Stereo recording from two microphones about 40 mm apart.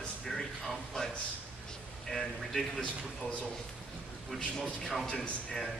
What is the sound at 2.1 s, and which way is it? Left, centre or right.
Speech, centre.